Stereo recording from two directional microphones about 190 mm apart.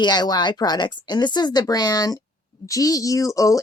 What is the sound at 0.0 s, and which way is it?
Speech, 20° left (ahead or behind).